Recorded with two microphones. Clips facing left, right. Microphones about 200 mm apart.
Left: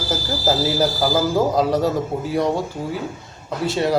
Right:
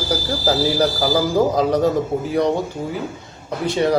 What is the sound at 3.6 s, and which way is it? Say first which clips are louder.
Speech: right 2 dB; 5° left (ahead or behind).